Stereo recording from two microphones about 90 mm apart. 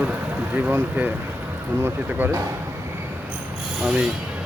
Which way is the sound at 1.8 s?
25° right (ahead or behind).